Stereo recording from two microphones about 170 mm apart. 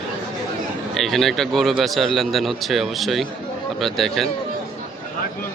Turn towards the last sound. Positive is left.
turn(degrees=0)  # may be behind; listen again after turning